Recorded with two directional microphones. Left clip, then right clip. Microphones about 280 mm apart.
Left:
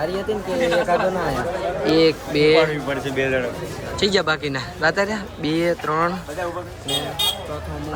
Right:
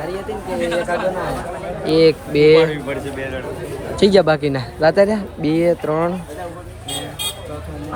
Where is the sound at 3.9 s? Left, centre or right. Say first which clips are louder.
Right 6 dB; centre.